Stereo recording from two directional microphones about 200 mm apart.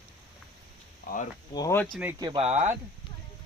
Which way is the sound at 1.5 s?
15° left (ahead or behind).